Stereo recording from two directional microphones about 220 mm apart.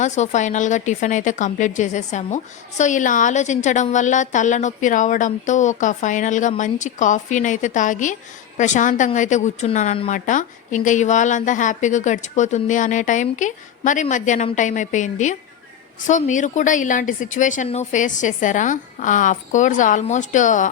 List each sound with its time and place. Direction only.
0.0 s a woman's voice: 30° left (ahead or behind)